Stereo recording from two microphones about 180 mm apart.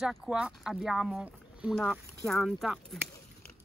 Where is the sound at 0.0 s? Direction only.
5° right (ahead or behind).